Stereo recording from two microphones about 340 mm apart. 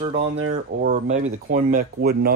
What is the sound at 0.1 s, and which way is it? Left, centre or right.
Speech, right.